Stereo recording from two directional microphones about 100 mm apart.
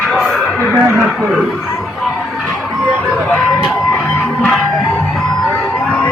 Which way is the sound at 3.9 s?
5° left (ahead or behind).